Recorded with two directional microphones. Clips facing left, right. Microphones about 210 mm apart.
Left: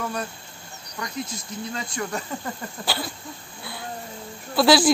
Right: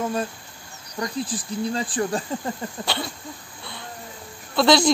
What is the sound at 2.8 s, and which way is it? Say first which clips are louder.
Speech: left 1 dB; 5° left (ahead or behind).